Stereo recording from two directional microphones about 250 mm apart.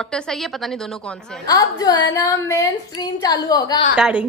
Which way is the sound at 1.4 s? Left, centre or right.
Centre.